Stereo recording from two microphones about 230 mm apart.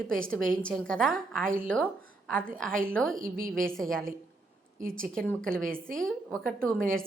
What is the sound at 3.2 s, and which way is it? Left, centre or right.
Speech, right.